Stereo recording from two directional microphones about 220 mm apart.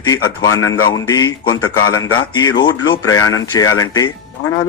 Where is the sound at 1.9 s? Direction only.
70° left (ahead or behind).